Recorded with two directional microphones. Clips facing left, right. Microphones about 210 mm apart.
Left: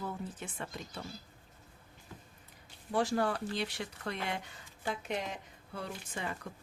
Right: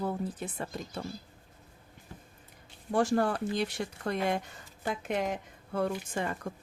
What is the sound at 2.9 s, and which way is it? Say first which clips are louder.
Speech: right 4 dB; 50° right (ahead or behind).